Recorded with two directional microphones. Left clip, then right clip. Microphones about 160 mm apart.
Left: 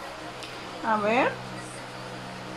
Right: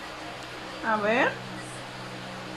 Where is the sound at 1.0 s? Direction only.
20° left (ahead or behind).